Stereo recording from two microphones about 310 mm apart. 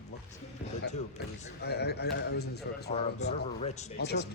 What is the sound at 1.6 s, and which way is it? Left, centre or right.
A man's voice, left.